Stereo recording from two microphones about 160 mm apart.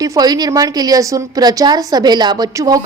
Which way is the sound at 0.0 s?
20° right (ahead or behind).